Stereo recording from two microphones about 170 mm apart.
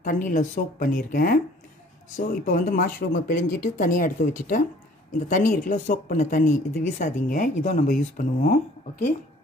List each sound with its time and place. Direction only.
0.0 s speech: 50° left (ahead or behind)